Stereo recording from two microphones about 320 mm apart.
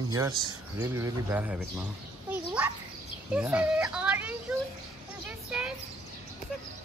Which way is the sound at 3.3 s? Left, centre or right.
Centre.